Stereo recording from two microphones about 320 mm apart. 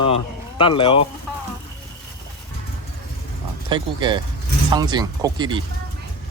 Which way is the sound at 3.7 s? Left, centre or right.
Centre.